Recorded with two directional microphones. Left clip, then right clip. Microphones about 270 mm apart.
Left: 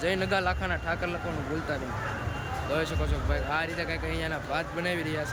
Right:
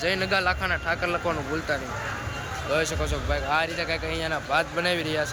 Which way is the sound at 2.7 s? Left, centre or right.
Centre.